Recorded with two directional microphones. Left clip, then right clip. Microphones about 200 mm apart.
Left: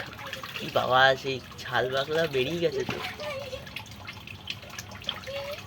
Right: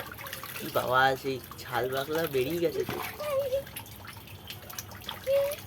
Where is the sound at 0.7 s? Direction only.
5° right (ahead or behind).